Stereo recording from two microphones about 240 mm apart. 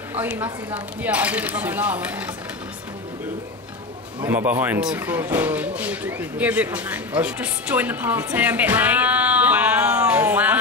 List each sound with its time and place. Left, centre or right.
0.1 s speech: centre
4.2 s speech: centre